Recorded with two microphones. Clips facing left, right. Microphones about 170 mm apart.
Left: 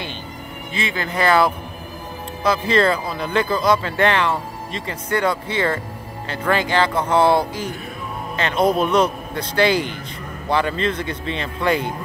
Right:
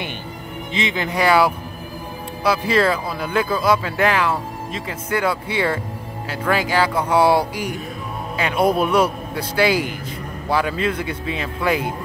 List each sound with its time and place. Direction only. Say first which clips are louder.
0.7 s speech: right 1 dB; 20° right (ahead or behind)